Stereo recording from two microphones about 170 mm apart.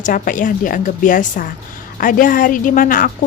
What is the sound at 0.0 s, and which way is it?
Speech, 50° left (ahead or behind).